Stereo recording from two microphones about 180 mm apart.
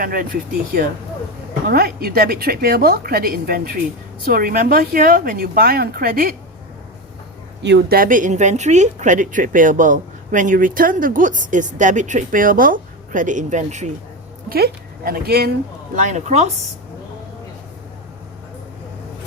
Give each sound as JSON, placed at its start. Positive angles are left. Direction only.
{"t": 0.0, "sound": "speech", "side_deg": -50}
{"t": 1.6, "sound": "a woman's voice", "side_deg": -60}
{"t": 7.6, "sound": "speech", "side_deg": -75}
{"t": 14.5, "sound": "speech", "side_deg": -55}
{"t": 16.0, "sound": "speech", "side_deg": -40}